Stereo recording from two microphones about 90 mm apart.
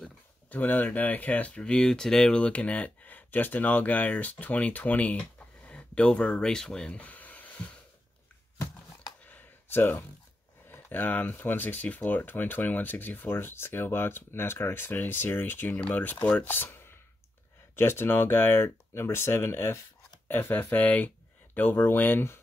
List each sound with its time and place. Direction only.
0.5 s speech: 20° left (ahead or behind)
9.2 s a sound: 20° left (ahead or behind)
10.7 s speech: 20° left (ahead or behind)